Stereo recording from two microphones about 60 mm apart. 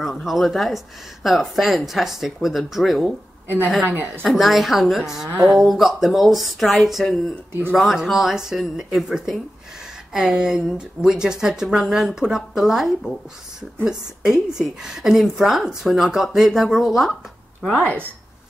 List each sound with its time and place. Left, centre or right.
0.0 s speech: centre
3.8 s speech: right
4.4 s a woman's voice: centre